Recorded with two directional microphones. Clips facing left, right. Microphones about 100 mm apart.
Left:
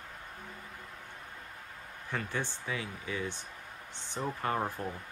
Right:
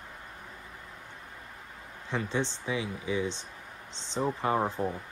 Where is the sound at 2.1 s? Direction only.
20° right (ahead or behind).